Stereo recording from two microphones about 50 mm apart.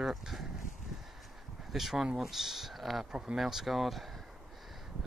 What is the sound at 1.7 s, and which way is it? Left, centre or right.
Speech, centre.